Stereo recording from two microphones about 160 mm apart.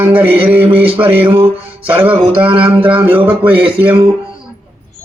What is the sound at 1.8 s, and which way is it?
Speech, 10° right (ahead or behind).